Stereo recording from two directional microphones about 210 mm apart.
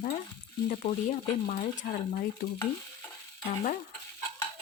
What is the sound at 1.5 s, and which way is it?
Speech, 40° left (ahead or behind).